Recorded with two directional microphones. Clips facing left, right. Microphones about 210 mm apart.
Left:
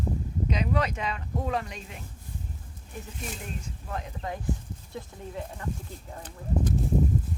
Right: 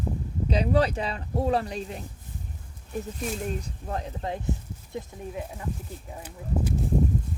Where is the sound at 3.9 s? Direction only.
30° right (ahead or behind).